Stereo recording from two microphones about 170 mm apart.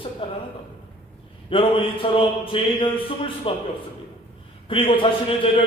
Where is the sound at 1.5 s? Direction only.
30° left (ahead or behind).